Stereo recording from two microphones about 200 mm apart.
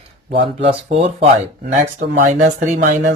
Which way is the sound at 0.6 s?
30° right (ahead or behind).